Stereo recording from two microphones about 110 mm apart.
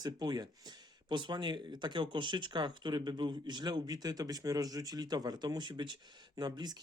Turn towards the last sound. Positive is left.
turn(degrees=-40)  # may be behind; listen again after turning